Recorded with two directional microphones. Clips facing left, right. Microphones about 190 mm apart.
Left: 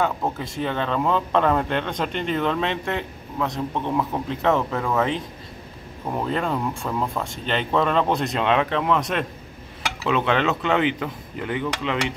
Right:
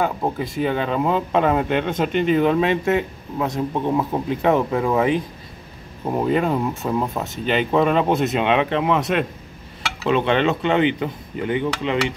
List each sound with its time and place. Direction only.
0.0 s speech: 10° right (ahead or behind)
6.8 s speech: 20° right (ahead or behind)
7.2 s speech: 10° right (ahead or behind)